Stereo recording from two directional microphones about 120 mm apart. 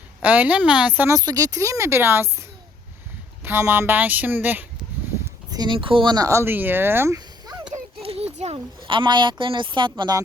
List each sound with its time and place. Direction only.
0.2 s speech: 15° right (ahead or behind)
1.1 s speech: 30° right (ahead or behind)
3.4 s speech: 20° right (ahead or behind)
5.5 s speech: 35° right (ahead or behind); by 7.2 s 20° right (ahead or behind)
8.0 s a sound: 55° right (ahead or behind)
8.5 s speech: 45° right (ahead or behind)